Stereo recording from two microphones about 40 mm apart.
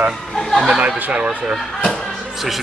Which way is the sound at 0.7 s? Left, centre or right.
Right.